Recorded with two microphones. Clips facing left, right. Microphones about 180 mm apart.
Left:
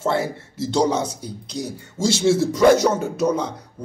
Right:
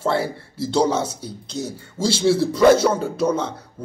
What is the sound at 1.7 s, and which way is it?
A man's voice, 20° left (ahead or behind).